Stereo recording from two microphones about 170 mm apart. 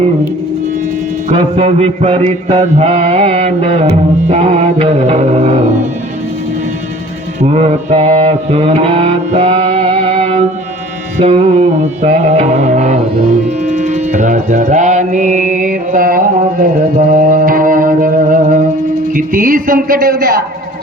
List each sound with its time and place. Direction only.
1.3 s mantra: 40° right (ahead or behind)
7.4 s mantra: 40° right (ahead or behind)
13.7 s music: 45° right (ahead or behind); by 20.3 s 60° right (ahead or behind)